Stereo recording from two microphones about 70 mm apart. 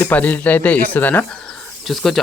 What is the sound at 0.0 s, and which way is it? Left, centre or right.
Speech, left.